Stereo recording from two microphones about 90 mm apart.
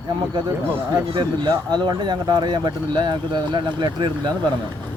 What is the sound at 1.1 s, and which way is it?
Speech, 60° right (ahead or behind).